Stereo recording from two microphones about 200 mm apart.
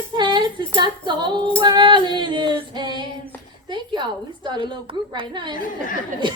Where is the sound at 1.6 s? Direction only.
20° right (ahead or behind).